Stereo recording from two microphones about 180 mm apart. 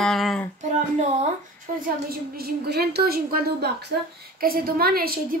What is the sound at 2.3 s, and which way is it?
A woman's voice, 60° right (ahead or behind).